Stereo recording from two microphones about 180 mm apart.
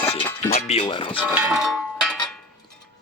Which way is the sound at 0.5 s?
35° left (ahead or behind).